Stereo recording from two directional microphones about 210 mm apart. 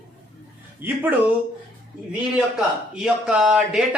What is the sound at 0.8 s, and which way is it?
Speech, 10° right (ahead or behind).